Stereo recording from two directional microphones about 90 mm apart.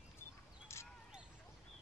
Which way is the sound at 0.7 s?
30° left (ahead or behind).